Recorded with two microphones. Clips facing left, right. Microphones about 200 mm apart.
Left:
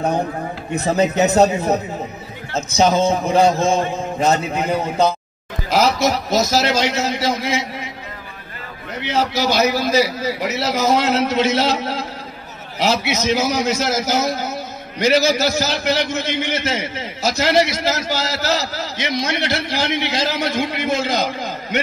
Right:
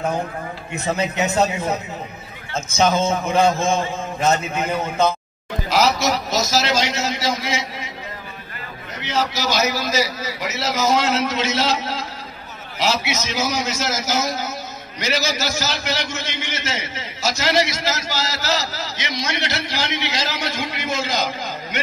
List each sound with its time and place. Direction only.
0.7 s a man's voice: 35° left (ahead or behind)
5.7 s a man's voice: 55° left (ahead or behind)
9.0 s a man's voice: 55° left (ahead or behind)